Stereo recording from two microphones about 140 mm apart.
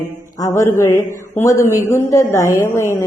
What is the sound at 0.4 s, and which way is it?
A man's voice, 20° left (ahead or behind).